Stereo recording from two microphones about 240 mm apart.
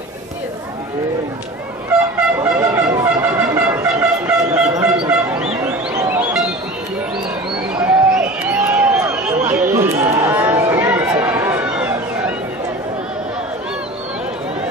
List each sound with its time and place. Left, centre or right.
2.5 s shofar: centre
5.0 s fowl: centre
7.7 s a sound: centre